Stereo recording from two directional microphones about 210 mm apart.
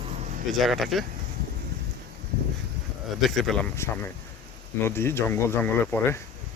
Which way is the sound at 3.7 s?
10° left (ahead or behind).